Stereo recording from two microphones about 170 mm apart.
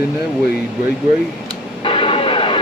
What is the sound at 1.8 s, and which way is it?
Radio, 30° left (ahead or behind).